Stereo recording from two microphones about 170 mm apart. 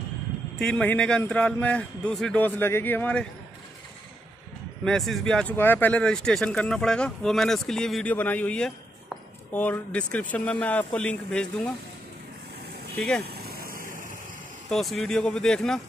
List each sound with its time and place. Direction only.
0.6 s a man's voice: 5° left (ahead or behind)
4.8 s a man's voice: centre (ahead or behind)
12.9 s speech: 5° left (ahead or behind)
13.2 s vehicle: 65° right (ahead or behind)
14.7 s speech: centre (ahead or behind)